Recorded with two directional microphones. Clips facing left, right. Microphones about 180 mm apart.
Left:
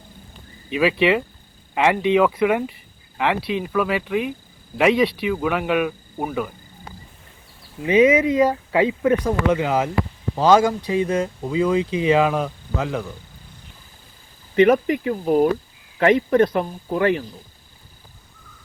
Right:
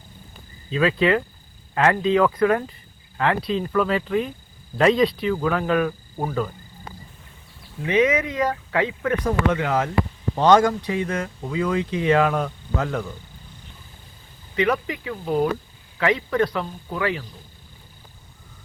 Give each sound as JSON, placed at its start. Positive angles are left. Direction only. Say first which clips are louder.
{"t": 0.7, "sound": "speech", "louder": "left 1 dB", "side_deg": 15}
{"t": 7.9, "sound": "speech", "louder": "left 5 dB", "side_deg": 10}
{"t": 8.9, "sound": "speech", "louder": "left 4 dB", "side_deg": 25}
{"t": 10.9, "sound": "speech", "louder": "left 5 dB", "side_deg": 25}
{"t": 12.0, "sound": "speech", "louder": "even", "side_deg": 10}
{"t": 14.5, "sound": "speech", "louder": "left 7 dB", "side_deg": 50}
{"t": 15.2, "sound": "speech", "louder": "left 4 dB", "side_deg": 10}
{"t": 16.0, "sound": "speech", "louder": "left 5 dB", "side_deg": 50}